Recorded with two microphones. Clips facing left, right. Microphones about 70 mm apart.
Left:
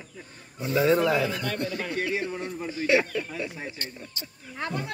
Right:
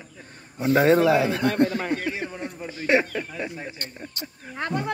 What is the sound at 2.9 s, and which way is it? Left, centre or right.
Speech, right.